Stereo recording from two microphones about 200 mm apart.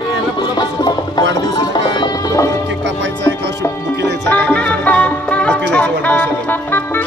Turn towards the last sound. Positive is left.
turn(degrees=10)  # may be behind; listen again after turning